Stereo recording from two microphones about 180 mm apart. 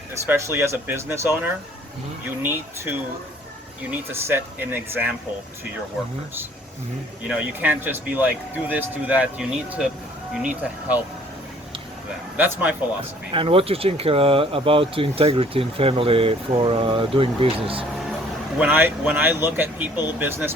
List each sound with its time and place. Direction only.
0.3 s speech: 15° right (ahead or behind)
7.3 s speech: 10° right (ahead or behind)
12.4 s speech: 10° right (ahead or behind)
13.3 s speech: 30° right (ahead or behind)
18.6 s speech: 10° right (ahead or behind)